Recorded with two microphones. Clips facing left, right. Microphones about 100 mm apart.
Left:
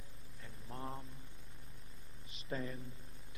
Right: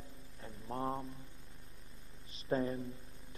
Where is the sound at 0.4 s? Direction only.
30° right (ahead or behind).